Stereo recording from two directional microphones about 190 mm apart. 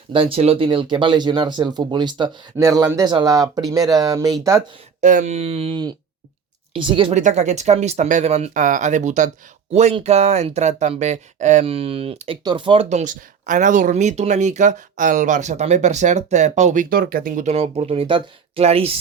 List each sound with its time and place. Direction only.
0.1 s speech: 30° right (ahead or behind)
4.9 s speech: 40° right (ahead or behind)
7.2 s speech: 40° right (ahead or behind)
16.9 s speech: 50° right (ahead or behind)
17.5 s speech: 30° right (ahead or behind)